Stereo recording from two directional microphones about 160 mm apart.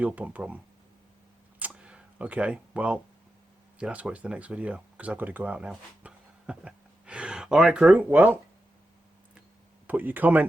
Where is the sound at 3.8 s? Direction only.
10° right (ahead or behind).